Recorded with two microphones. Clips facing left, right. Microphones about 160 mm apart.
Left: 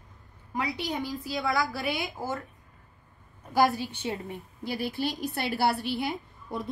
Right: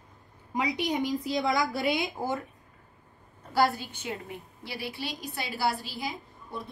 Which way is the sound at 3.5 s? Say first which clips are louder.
Left 2 dB; 20° left (ahead or behind).